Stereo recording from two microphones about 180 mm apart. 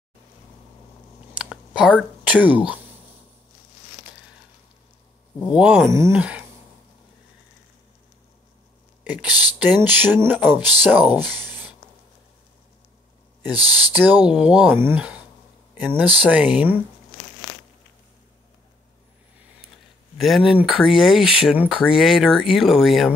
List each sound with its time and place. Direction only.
1.3 s a sound: 5° right (ahead or behind)
2.2 s speech: 10° right (ahead or behind)
5.5 s speech: 5° right (ahead or behind)
9.0 s speech: 5° right (ahead or behind)
13.5 s speech: 20° left (ahead or behind)
13.9 s speech: 10° right (ahead or behind)
20.2 s speech: centre (ahead or behind)